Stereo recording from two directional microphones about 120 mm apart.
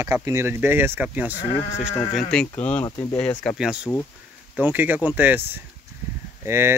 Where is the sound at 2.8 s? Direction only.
30° left (ahead or behind).